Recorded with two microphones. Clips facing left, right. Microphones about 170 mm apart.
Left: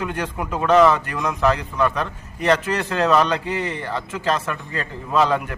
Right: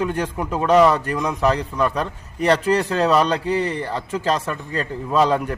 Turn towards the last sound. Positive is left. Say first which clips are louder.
# right 1 dB
turn(degrees=-35)  # may be behind; listen again after turning